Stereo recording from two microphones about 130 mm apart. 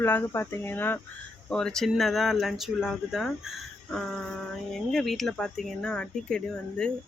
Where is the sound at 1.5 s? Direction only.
5° left (ahead or behind).